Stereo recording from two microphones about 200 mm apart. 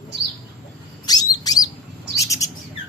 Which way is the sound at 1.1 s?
20° left (ahead or behind).